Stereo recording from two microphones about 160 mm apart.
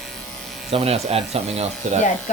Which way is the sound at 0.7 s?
40° right (ahead or behind).